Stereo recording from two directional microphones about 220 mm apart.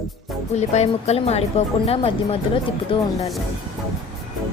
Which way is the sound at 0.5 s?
30° left (ahead or behind).